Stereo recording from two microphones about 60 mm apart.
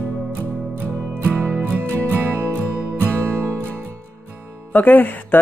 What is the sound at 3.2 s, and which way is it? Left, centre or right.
Music, right.